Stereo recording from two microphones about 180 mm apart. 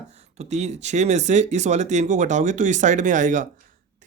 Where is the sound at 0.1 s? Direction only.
35° right (ahead or behind).